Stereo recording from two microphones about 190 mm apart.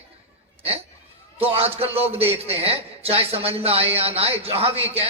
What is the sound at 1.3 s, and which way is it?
A man's voice, 30° right (ahead or behind).